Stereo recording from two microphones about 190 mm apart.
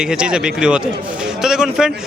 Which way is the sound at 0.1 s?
5° right (ahead or behind).